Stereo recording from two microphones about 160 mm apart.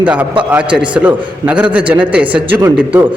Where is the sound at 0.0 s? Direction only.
10° right (ahead or behind).